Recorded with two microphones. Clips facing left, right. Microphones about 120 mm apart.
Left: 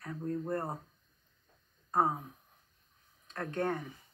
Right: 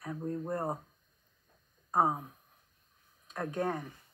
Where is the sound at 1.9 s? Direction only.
10° right (ahead or behind).